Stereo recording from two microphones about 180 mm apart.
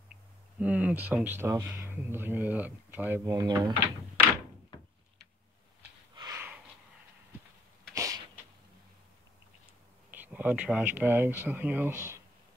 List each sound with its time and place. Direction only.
0.6 s speech: 5° right (ahead or behind)
3.3 s speech: 20° right (ahead or behind)
6.1 s snort: 20° right (ahead or behind)
7.9 s a sound: 20° right (ahead or behind)
10.1 s speech: 10° right (ahead or behind)